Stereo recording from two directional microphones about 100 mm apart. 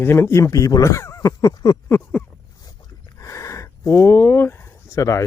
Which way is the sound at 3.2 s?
30° left (ahead or behind).